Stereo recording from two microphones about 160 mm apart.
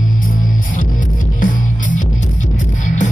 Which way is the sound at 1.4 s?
55° left (ahead or behind).